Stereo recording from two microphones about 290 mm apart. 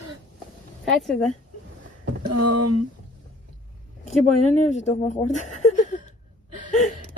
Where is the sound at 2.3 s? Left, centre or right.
Right.